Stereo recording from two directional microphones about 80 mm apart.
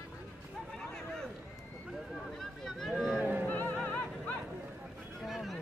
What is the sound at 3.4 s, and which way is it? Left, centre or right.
Music, left.